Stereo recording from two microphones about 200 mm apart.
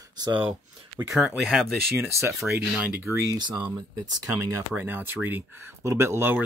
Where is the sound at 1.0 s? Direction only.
5° right (ahead or behind).